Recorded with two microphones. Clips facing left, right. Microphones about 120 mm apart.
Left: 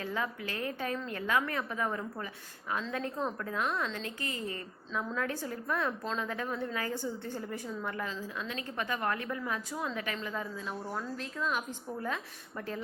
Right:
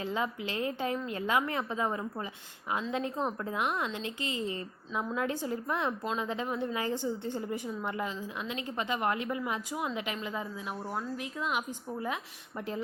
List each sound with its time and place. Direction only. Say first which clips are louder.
0.0 s a woman's voice: right 2 dB; 20° right (ahead or behind)